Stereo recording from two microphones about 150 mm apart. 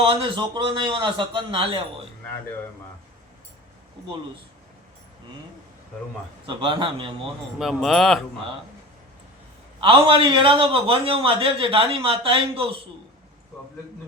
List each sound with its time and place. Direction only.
0.0 s a man's voice: 35° right (ahead or behind)
6.4 s a man's voice: 35° right (ahead or behind)
7.6 s speech: centre (ahead or behind)
9.8 s a man's voice: 35° right (ahead or behind)